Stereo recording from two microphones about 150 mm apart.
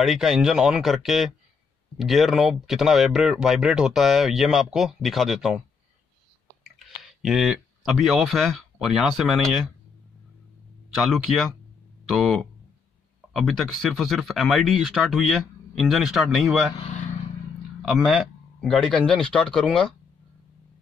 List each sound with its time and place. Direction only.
0.0 s speech: centre (ahead or behind)
6.6 s speech: centre (ahead or behind)
11.0 s speech: centre (ahead or behind)
16.7 s vehicle: 50° left (ahead or behind)
17.8 s speech: centre (ahead or behind)